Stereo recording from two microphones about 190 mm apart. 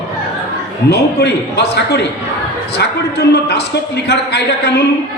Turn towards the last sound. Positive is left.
turn(degrees=60)  # may be behind; listen again after turning